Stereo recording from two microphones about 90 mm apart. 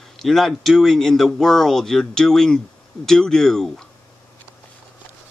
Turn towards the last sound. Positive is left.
turn(degrees=5)  # may be behind; listen again after turning